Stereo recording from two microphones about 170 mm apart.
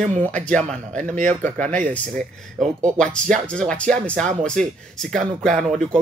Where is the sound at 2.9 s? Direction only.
5° left (ahead or behind).